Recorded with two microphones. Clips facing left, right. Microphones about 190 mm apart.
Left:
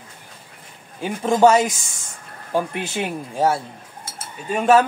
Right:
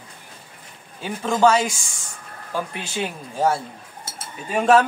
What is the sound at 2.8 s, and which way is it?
Speech, 15° left (ahead or behind).